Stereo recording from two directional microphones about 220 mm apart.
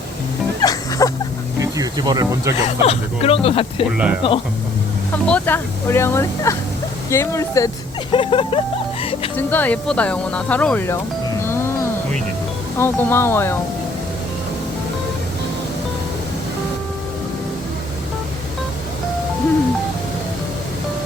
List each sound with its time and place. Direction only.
0.6 s music: 15° left (ahead or behind)
1.5 s speech: 15° right (ahead or behind)
2.8 s music: 25° left (ahead or behind)
3.9 s speech: 5° right (ahead or behind)
5.2 s speech: 5° left (ahead or behind)
8.1 s music: 25° left (ahead or behind)
9.3 s speech: 10° left (ahead or behind)
11.4 s music: 10° left (ahead or behind)
12.8 s speech: 10° left (ahead or behind)